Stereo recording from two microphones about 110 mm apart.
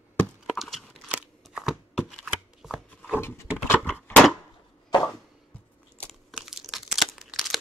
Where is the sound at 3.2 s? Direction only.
25° left (ahead or behind).